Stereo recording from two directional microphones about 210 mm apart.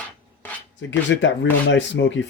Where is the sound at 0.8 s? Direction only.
60° left (ahead or behind).